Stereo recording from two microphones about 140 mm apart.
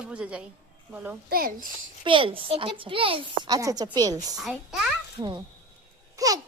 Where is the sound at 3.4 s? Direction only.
25° right (ahead or behind).